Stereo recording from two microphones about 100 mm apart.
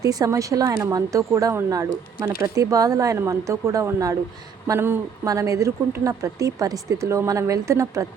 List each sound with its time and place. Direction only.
0.0 s a woman's voice: 35° right (ahead or behind)
5.2 s a woman's voice: 35° right (ahead or behind)